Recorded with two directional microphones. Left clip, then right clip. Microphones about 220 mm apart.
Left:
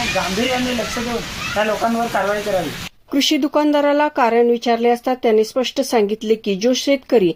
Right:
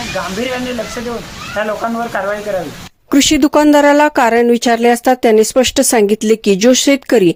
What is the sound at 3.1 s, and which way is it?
Speech, 50° right (ahead or behind).